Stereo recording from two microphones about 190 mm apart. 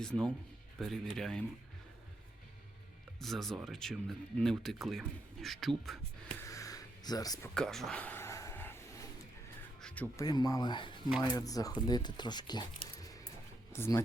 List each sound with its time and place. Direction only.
0.0 s speech: 5° left (ahead or behind)
3.2 s speech: centre (ahead or behind)
6.4 s a sound: 15° left (ahead or behind)
7.5 s a sound: 5° left (ahead or behind)
9.8 s speech: 10° left (ahead or behind)
10.2 s speech: 20° left (ahead or behind)
13.0 s music: 20° left (ahead or behind)
13.7 s speech: 10° left (ahead or behind)